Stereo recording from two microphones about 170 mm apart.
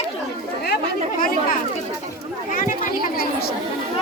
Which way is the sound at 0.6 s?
60° left (ahead or behind).